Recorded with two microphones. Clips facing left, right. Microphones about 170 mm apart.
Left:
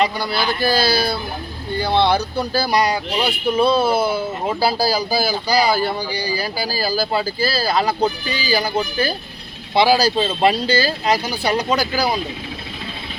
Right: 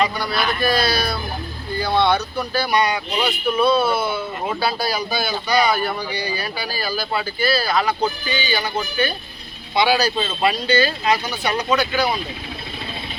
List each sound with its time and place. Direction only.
0.0 s a man's voice: 30° left (ahead or behind)